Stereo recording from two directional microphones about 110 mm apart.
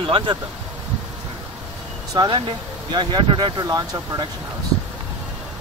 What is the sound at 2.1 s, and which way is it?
Speech, 40° right (ahead or behind).